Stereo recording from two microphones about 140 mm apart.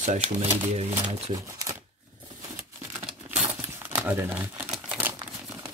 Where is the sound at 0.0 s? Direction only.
60° right (ahead or behind).